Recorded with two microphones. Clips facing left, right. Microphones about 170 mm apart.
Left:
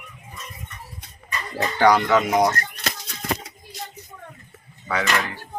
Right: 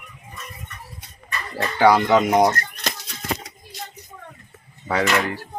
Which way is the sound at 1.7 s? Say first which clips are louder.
Right 1 dB; 10° right (ahead or behind).